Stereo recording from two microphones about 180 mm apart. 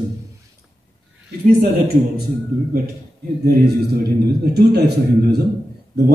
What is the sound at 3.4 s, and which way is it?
A man's voice, 60° right (ahead or behind).